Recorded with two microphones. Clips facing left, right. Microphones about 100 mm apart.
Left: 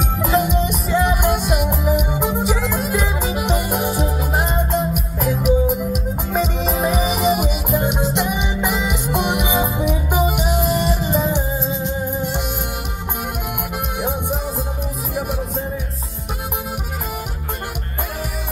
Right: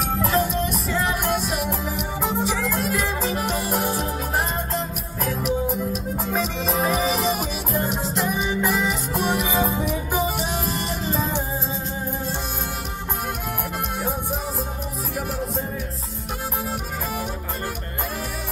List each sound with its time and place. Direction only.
0.2 s music: 5° left (ahead or behind)
9.1 s music: 20° left (ahead or behind)